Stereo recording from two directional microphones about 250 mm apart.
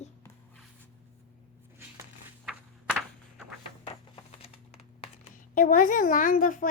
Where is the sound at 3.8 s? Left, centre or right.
Left.